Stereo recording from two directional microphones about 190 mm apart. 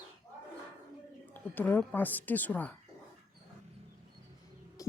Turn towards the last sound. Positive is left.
turn(degrees=15)  # may be behind; listen again after turning